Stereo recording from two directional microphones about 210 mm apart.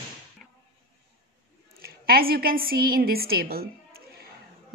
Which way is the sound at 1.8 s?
45° right (ahead or behind).